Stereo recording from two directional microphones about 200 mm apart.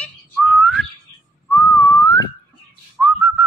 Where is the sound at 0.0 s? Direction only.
5° left (ahead or behind).